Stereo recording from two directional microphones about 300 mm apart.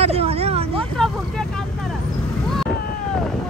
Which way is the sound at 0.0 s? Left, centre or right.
Centre.